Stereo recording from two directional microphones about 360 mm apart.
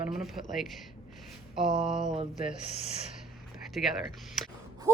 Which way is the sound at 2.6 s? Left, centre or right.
Centre.